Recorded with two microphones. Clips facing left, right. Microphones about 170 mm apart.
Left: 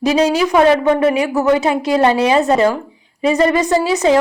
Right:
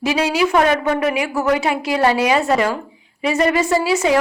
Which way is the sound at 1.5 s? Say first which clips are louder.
Left 4 dB; 30° left (ahead or behind).